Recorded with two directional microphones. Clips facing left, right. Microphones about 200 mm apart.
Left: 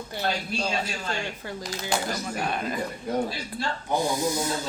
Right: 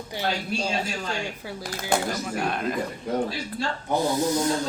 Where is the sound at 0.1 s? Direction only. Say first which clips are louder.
Right 2 dB; 10° right (ahead or behind).